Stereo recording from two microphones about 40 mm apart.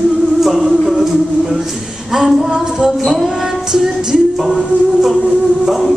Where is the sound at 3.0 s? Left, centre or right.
Centre.